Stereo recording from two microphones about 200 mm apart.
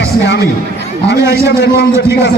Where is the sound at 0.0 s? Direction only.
60° left (ahead or behind).